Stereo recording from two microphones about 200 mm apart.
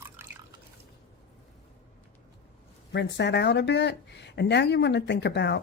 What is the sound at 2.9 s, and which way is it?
Speech, 60° left (ahead or behind).